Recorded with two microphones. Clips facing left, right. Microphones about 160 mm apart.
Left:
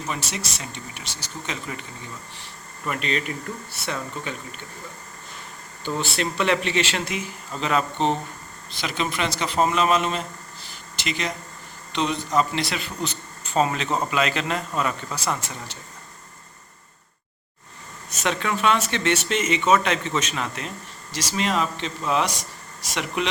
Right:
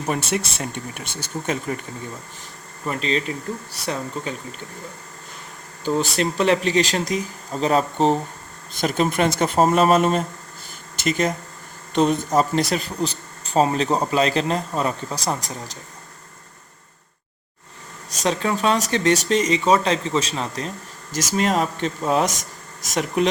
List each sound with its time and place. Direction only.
0.1 s speech: 55° right (ahead or behind)
2.8 s speech: 30° right (ahead or behind)
5.8 s speech: 40° right (ahead or behind)
18.2 s speech: 35° right (ahead or behind)